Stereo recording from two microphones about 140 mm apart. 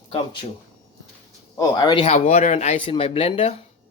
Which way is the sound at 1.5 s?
30° left (ahead or behind).